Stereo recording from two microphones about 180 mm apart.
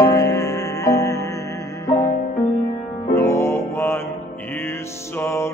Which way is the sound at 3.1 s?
15° left (ahead or behind).